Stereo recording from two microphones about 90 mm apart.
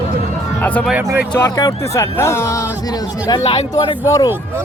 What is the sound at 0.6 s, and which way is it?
Speech, 20° left (ahead or behind).